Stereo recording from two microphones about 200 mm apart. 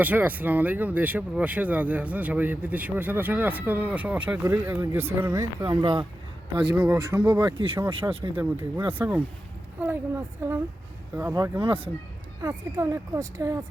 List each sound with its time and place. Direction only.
0.0 s speech: 10° right (ahead or behind)
6.7 s speech: 10° right (ahead or behind)
7.4 s speech: 25° right (ahead or behind)
9.0 s speech: 10° right (ahead or behind)
11.6 s speech: 25° right (ahead or behind)
12.4 s speech: 15° right (ahead or behind)